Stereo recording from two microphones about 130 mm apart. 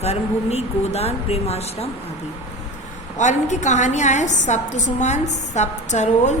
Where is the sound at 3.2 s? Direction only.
65° left (ahead or behind).